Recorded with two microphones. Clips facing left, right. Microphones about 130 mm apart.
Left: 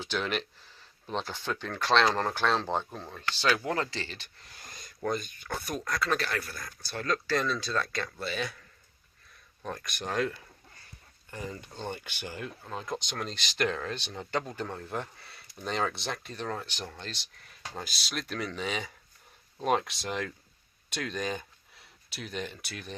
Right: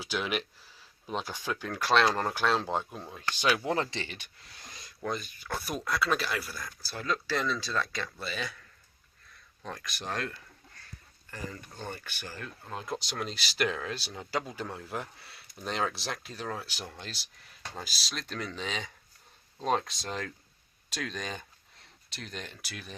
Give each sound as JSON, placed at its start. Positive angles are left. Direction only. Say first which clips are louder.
{"t": 0.0, "sound": "speech", "louder": "left 1 dB", "side_deg": -10}
{"t": 4.4, "sound": "speech", "louder": "left 1 dB", "side_deg": 0}
{"t": 9.6, "sound": "speech", "louder": "left 2 dB", "side_deg": 0}
{"t": 11.3, "sound": "speech", "louder": "left 2 dB", "side_deg": 20}
{"t": 12.6, "sound": "speech", "louder": "right 1 dB", "side_deg": 0}